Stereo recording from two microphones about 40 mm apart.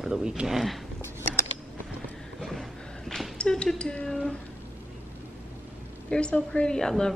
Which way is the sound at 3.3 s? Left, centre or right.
Left.